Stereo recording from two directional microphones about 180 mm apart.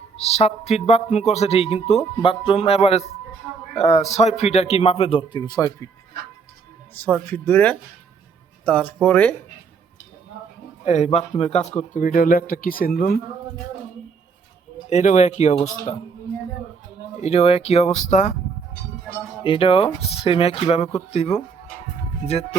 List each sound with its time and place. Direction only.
0.2 s speech: 35° left (ahead or behind); by 5.9 s 20° left (ahead or behind)
6.9 s speech: 10° left (ahead or behind)
10.8 s speech: 40° left (ahead or behind); by 13.1 s 55° left (ahead or behind)
14.8 s speech: 40° left (ahead or behind)
17.2 s speech: 35° left (ahead or behind)
19.4 s speech: 30° left (ahead or behind)